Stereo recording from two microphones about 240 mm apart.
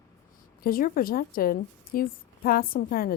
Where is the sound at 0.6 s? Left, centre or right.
Left.